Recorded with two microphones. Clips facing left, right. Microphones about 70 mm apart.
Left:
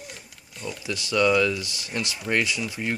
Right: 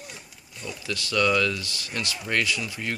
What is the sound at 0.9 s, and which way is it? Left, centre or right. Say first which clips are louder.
Speech: left 2 dB; centre.